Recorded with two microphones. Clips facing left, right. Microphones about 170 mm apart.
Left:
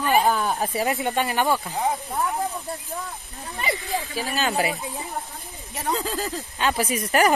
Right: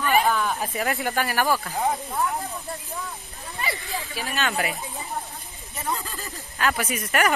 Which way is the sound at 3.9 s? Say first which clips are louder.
Left 2 dB; 35° left (ahead or behind).